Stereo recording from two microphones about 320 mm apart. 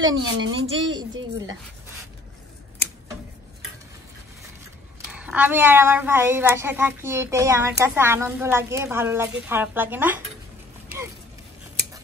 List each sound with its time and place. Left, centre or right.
0.0 s a woman's voice: right
5.0 s a woman's voice: centre